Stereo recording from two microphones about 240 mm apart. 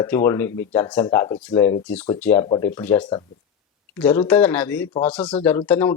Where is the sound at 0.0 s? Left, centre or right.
Centre.